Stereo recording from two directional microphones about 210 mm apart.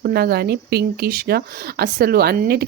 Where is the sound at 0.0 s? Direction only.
50° right (ahead or behind).